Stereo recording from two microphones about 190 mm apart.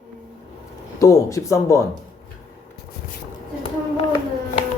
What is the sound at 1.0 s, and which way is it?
Speech, 15° left (ahead or behind).